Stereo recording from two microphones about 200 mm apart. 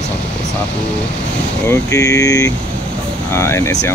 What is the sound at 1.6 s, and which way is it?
Speech, 15° left (ahead or behind).